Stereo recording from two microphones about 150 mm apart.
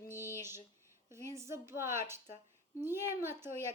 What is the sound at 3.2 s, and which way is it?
Speech, 15° right (ahead or behind).